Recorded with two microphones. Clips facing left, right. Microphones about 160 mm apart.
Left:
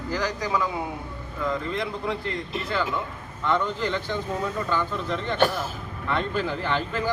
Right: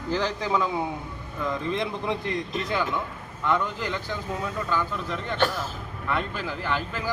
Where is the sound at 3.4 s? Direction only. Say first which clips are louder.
Left 1 dB; 10° right (ahead or behind).